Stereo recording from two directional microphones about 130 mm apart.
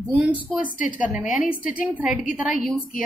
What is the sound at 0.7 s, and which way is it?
Speech, 90° left.